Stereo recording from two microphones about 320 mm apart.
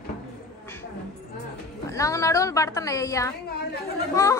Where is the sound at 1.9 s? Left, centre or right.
Centre.